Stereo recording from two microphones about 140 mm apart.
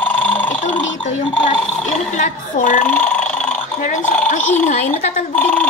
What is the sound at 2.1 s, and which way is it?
Speech, 65° left (ahead or behind).